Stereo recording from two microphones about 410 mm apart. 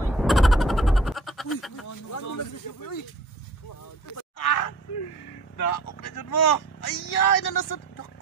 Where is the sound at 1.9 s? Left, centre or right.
Left.